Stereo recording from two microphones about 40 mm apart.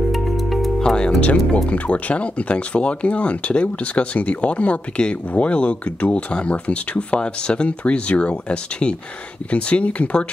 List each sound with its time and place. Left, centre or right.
0.1 s music: centre
0.7 s speech: centre
1.7 s speech: left
7.2 s speech: left